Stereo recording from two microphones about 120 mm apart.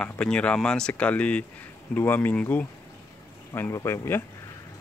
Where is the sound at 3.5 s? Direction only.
20° left (ahead or behind).